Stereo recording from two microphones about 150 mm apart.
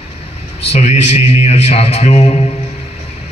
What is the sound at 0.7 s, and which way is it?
A man's voice, 45° left (ahead or behind).